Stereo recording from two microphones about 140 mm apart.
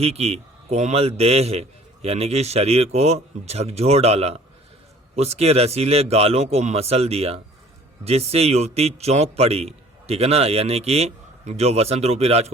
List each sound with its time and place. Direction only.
0.0 s a man's voice: 45° right (ahead or behind)